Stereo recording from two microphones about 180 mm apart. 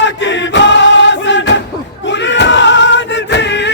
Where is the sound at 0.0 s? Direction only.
90° left.